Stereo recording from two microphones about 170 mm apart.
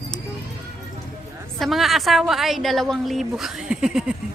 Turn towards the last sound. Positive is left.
turn(degrees=-5)  # may be behind; listen again after turning